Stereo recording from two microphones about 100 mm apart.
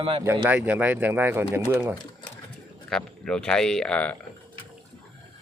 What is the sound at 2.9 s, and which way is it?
Speech, 10° left (ahead or behind).